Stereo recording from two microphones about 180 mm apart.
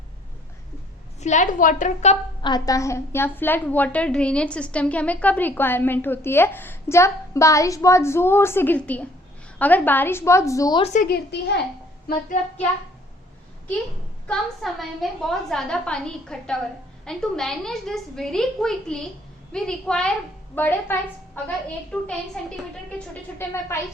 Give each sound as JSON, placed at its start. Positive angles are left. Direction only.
{"t": 1.2, "sound": "a woman's voice", "side_deg": 40}
{"t": 2.4, "sound": "a woman's voice", "side_deg": 20}
{"t": 10.8, "sound": "a woman's voice", "side_deg": 40}
{"t": 11.1, "sound": "a woman's voice", "side_deg": 70}
{"t": 14.3, "sound": "a woman's voice", "side_deg": 0}